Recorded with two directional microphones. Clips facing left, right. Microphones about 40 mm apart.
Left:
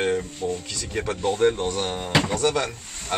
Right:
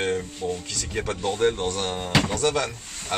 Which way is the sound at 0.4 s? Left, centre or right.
Centre.